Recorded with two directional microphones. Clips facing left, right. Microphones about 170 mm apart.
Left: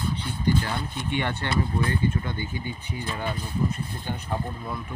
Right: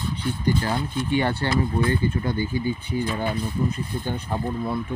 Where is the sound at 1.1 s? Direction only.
35° right (ahead or behind).